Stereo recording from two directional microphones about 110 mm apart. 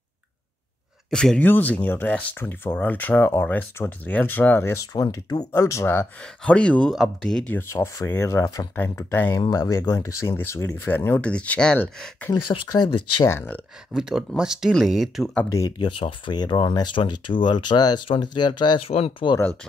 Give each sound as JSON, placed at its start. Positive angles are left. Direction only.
{"t": 1.1, "sound": "speech", "side_deg": 5}
{"t": 1.4, "sound": "speech", "side_deg": 15}
{"t": 4.9, "sound": "speech", "side_deg": 35}
{"t": 6.2, "sound": "speech", "side_deg": 10}
{"t": 7.5, "sound": "speech", "side_deg": 25}
{"t": 12.4, "sound": "speech", "side_deg": 40}
{"t": 13.3, "sound": "speech", "side_deg": 20}
{"t": 13.9, "sound": "speech", "side_deg": -5}
{"t": 15.8, "sound": "speech", "side_deg": 50}
{"t": 18.8, "sound": "speech", "side_deg": 65}